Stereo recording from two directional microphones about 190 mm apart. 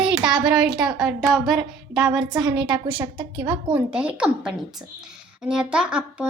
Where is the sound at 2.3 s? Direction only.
20° right (ahead or behind).